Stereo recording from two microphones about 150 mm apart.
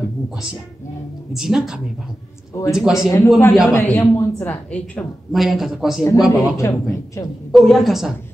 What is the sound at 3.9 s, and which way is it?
Speech, 20° left (ahead or behind).